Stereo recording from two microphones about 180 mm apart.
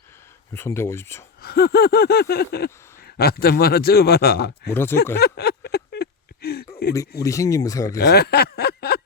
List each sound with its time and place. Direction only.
0.5 s speech: 15° left (ahead or behind)
1.4 s a man's voice: 60° left (ahead or behind)
4.7 s speech: 10° left (ahead or behind)
5.2 s a sound: 60° left (ahead or behind)
7.2 s speech: 20° left (ahead or behind)
8.0 s a sound: 60° left (ahead or behind)